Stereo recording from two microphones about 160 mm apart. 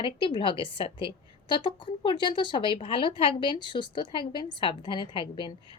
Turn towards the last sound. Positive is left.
turn(degrees=30)  # may be behind; listen again after turning